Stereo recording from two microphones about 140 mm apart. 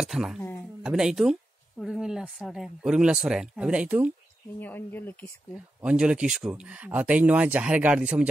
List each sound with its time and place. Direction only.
0.0 s speech: 5° right (ahead or behind)
4.6 s speech: 15° left (ahead or behind)
5.5 s speech: 10° right (ahead or behind)